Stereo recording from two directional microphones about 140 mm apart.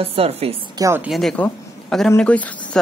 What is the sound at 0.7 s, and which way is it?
Speech, 20° right (ahead or behind).